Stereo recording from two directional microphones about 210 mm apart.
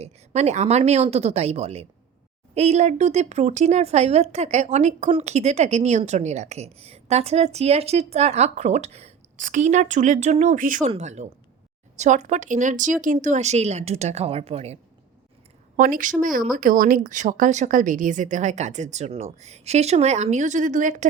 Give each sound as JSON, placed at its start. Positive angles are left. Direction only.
{"t": 0.0, "sound": "a woman's voice", "side_deg": -30}
{"t": 15.7, "sound": "a woman's voice", "side_deg": -40}